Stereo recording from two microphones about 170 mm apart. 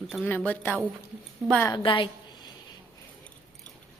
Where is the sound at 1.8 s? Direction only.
30° left (ahead or behind).